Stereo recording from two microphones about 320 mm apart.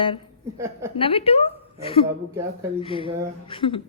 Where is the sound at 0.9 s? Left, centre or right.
Centre.